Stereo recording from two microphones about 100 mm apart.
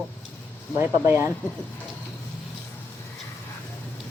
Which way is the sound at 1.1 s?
25° right (ahead or behind).